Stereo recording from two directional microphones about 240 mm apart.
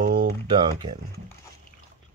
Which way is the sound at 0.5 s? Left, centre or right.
Centre.